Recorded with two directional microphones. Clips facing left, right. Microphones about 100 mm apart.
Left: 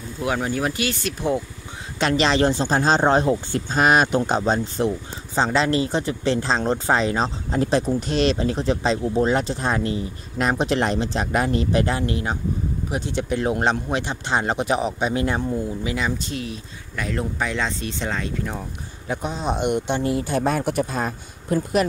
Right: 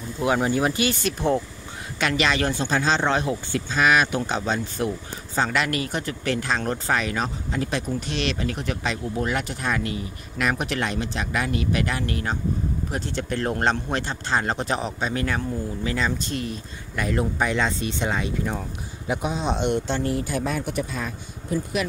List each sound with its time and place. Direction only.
0.2 s speech: 5° right (ahead or behind)
2.0 s speech: 30° left (ahead or behind); by 16.1 s 15° left (ahead or behind)
16.3 s speech: centre (ahead or behind)
19.4 s speech: 10° left (ahead or behind); by 20.4 s 25° left (ahead or behind)
21.0 s speech: 45° left (ahead or behind)
21.5 s speech: 60° left (ahead or behind)